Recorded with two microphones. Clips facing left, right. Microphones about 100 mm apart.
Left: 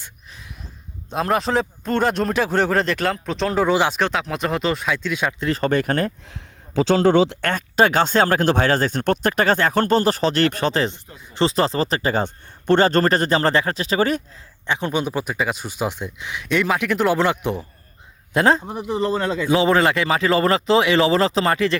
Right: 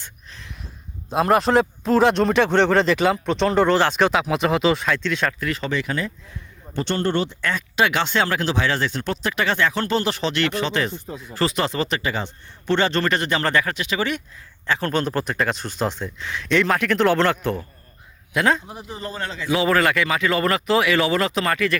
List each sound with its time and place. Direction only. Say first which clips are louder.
0.0 s a sound: even; 10° left (ahead or behind)
1.1 s speech: right 3 dB; centre (ahead or behind)
5.4 s speech: left 3 dB; 30° left (ahead or behind)
5.6 s speech: left 7 dB; 50° left (ahead or behind); by 6.4 s 65° left (ahead or behind)
7.4 s speech: left 3 dB; 45° left (ahead or behind)
11.3 s speech: left 3 dB; 30° left (ahead or behind)
14.7 s speech: even; 15° left (ahead or behind)
18.3 s speech: left 3 dB; 35° left (ahead or behind)
18.6 s speech: left 8 dB; 55° left (ahead or behind)
19.5 s a man's voice: left 2 dB; 30° left (ahead or behind)